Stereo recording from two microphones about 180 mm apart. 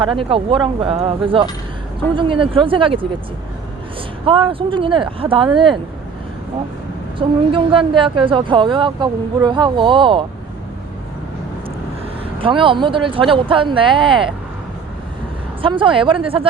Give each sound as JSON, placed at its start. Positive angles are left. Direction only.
{"t": 0.0, "sound": "speech", "side_deg": -30}
{"t": 4.3, "sound": "speech", "side_deg": -30}
{"t": 7.2, "sound": "speech", "side_deg": -30}
{"t": 12.4, "sound": "speech", "side_deg": -30}
{"t": 15.6, "sound": "speech", "side_deg": -30}